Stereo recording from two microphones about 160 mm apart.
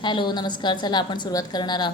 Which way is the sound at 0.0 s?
30° left (ahead or behind).